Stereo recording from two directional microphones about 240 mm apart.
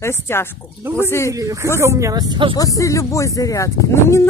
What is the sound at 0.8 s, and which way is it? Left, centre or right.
Speech, centre.